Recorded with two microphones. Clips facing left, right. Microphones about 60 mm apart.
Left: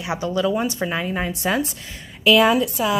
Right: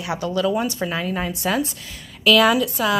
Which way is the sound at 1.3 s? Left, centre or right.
Left.